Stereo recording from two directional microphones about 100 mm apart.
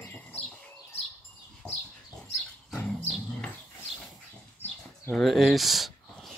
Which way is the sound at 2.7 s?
5° left (ahead or behind).